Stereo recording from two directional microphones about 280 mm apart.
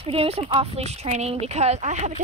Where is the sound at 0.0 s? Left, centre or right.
Right.